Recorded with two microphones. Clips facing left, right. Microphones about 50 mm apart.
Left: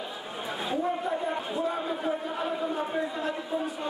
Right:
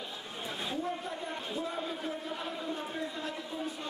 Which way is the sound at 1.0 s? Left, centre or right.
Left.